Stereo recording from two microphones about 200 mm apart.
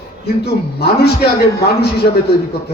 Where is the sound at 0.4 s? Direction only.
55° left (ahead or behind).